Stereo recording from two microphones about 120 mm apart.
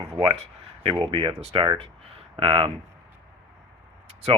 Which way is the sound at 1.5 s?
40° right (ahead or behind).